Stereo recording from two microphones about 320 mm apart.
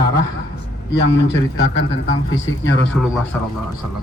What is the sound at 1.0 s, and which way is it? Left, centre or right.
Speech, left.